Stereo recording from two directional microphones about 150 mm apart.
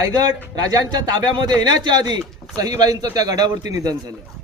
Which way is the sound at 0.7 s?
30° right (ahead or behind).